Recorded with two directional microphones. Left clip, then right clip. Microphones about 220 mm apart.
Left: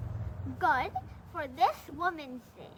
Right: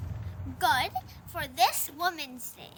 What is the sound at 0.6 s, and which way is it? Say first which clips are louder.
A woman's voice: right 2 dB; 20° right (ahead or behind).